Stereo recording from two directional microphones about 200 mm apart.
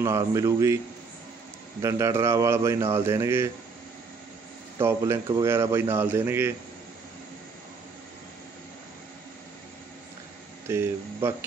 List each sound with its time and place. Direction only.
0.0 s speech: 15° right (ahead or behind)
1.8 s speech: 15° right (ahead or behind)
4.7 s speech: 15° right (ahead or behind)
10.7 s speech: 10° right (ahead or behind)